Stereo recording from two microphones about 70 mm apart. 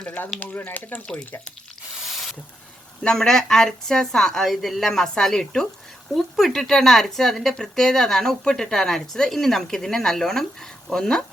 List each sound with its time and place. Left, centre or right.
0.3 s speech: left
3.0 s a woman's voice: centre